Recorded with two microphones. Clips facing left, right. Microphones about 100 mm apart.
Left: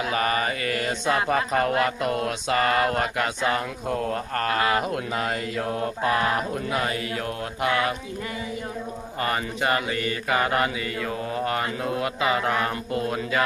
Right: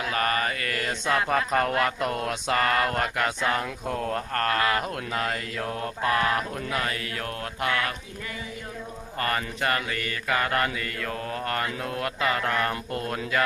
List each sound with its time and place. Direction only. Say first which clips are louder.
0.0 s mantra: left 2 dB; 15° left (ahead or behind)
7.6 s speech: left 4 dB; 20° left (ahead or behind)
9.2 s mantra: left 2 dB; 15° left (ahead or behind)